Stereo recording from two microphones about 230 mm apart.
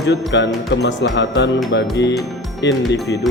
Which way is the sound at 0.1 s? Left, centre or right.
Left.